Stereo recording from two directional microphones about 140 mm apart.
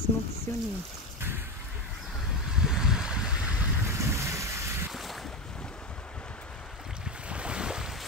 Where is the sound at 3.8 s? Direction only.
20° right (ahead or behind).